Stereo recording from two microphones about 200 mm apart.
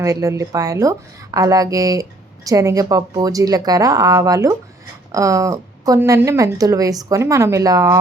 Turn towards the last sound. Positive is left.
turn(degrees=-15)  # may be behind; listen again after turning